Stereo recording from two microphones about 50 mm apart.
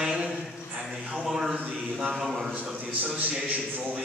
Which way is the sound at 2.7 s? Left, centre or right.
Right.